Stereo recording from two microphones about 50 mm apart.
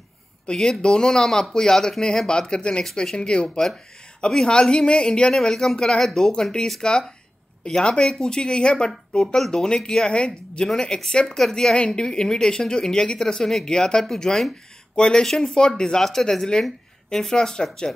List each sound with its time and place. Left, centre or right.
0.5 s speech: centre